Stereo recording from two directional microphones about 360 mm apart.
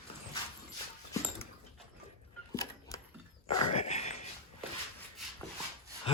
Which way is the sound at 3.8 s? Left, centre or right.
Centre.